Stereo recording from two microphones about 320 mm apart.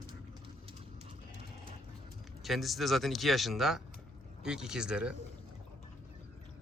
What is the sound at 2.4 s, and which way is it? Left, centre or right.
A man's voice, centre.